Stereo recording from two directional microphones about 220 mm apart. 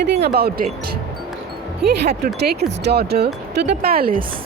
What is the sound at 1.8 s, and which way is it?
Speech, 45° right (ahead or behind).